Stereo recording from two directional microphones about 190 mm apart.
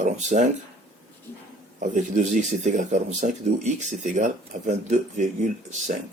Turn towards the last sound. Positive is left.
turn(degrees=-40)  # may be behind; listen again after turning